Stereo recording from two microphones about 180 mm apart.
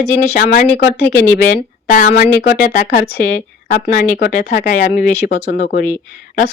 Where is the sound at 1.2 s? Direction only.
40° left (ahead or behind).